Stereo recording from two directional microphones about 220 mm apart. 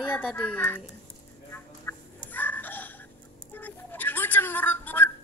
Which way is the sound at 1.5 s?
10° left (ahead or behind).